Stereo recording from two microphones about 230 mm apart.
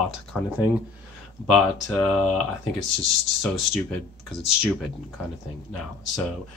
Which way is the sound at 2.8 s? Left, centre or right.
Left.